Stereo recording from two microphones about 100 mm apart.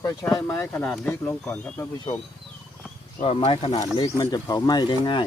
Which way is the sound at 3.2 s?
80° left.